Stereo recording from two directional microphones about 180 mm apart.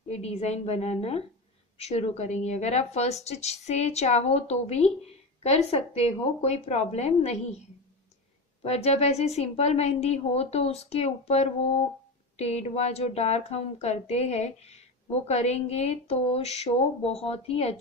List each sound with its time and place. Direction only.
0.1 s a woman's voice: 35° left (ahead or behind)
8.6 s a woman's voice: 35° left (ahead or behind)